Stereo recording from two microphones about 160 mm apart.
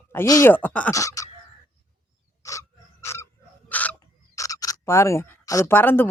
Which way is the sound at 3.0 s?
15° left (ahead or behind).